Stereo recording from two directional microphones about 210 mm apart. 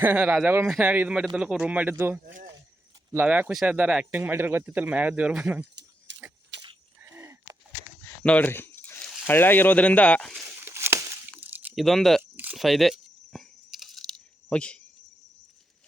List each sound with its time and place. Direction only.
0.0 s speech: 10° right (ahead or behind)
2.2 s speech: 40° right (ahead or behind)
3.1 s speech: 10° right (ahead or behind)
6.1 s a sound: 60° right (ahead or behind)
6.6 s wheeze: 20° right (ahead or behind)
8.0 s speech: 10° left (ahead or behind)
10.4 s a sound: 10° right (ahead or behind); by 14.8 s 5° left (ahead or behind)